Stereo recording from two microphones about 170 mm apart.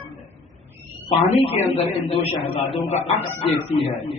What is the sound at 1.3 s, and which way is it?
A man's voice, 40° left (ahead or behind).